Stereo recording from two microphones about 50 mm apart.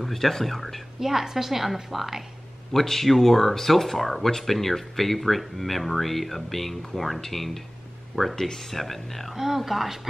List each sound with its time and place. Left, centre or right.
0.0 s speech: centre
2.7 s speech: centre
9.3 s speech: centre